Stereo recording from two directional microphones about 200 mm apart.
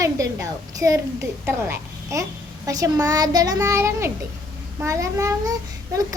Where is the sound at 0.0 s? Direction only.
15° right (ahead or behind).